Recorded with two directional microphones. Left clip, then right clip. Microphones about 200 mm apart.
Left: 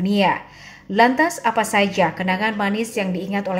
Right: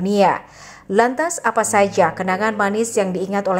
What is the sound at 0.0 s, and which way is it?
Speech, 20° right (ahead or behind).